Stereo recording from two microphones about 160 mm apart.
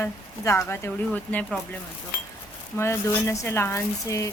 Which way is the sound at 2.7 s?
15° left (ahead or behind).